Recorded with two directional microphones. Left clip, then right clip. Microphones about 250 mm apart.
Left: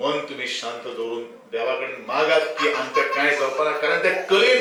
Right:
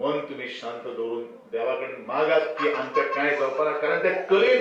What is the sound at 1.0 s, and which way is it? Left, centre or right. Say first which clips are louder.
Speech: left 1 dB; right.